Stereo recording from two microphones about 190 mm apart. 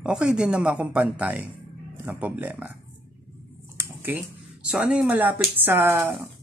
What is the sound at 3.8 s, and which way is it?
Speech, 10° right (ahead or behind).